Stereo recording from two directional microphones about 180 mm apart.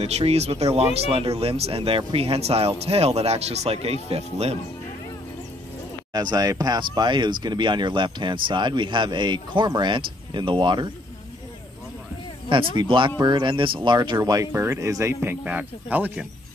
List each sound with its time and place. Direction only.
0.0 s speech: 35° right (ahead or behind)
6.1 s speech: 20° right (ahead or behind)
12.4 s speech: 30° right (ahead or behind); by 16.3 s 10° right (ahead or behind)